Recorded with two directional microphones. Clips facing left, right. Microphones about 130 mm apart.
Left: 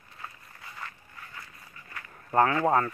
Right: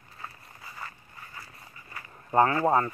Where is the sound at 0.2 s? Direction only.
5° right (ahead or behind).